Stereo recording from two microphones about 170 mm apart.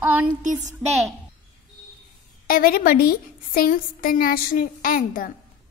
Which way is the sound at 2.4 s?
60° left (ahead or behind).